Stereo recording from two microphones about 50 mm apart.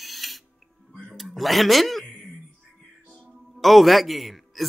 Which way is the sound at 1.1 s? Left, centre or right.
Centre.